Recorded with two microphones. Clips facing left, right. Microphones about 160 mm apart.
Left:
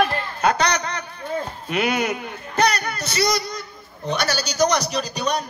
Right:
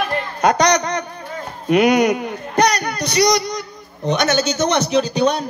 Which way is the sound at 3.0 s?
15° right (ahead or behind).